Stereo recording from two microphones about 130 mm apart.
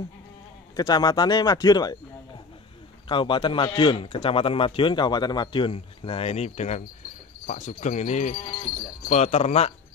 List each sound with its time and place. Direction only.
0.7 s a man's voice: 30° left (ahead or behind)
3.1 s a man's voice: 40° left (ahead or behind); by 9.7 s 55° left (ahead or behind)